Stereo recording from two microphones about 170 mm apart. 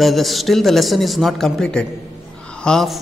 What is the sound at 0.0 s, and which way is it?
Speech, centre (ahead or behind).